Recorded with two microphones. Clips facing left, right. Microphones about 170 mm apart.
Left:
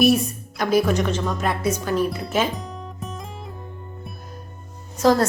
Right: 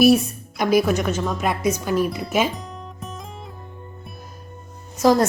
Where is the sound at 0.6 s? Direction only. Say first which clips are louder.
Right 1 dB; 10° right (ahead or behind).